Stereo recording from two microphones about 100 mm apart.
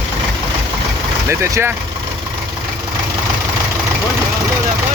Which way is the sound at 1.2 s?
25° right (ahead or behind).